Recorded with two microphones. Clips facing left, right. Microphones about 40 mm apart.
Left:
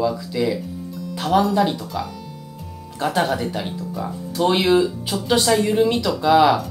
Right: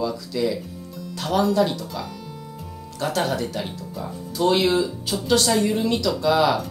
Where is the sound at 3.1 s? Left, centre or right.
Centre.